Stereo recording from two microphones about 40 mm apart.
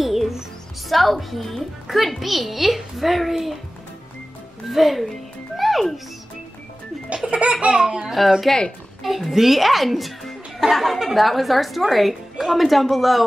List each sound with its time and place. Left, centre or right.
0.0 s music: centre
0.8 s speech: centre
4.6 s a child's voice: centre
7.2 s laughter: right
8.1 s speech: centre
8.5 s speech: centre
9.0 s speech: centre